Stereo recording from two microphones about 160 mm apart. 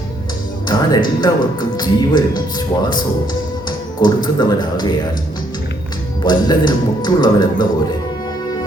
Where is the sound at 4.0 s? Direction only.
25° left (ahead or behind).